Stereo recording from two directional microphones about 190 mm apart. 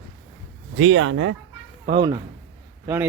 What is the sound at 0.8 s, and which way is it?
Speech, 90° right.